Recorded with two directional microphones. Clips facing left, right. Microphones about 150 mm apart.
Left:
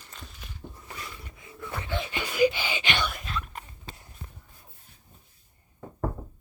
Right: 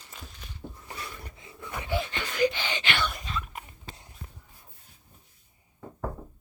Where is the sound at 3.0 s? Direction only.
Centre (ahead or behind).